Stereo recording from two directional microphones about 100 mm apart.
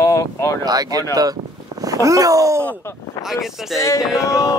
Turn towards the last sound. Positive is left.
turn(degrees=30)  # may be behind; listen again after turning